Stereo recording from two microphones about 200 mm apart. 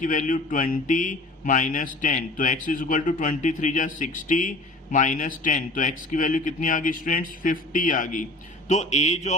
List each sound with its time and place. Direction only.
0.0 s a man's voice: 40° left (ahead or behind)